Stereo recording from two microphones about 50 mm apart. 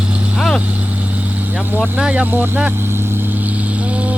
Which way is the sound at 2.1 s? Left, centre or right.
Right.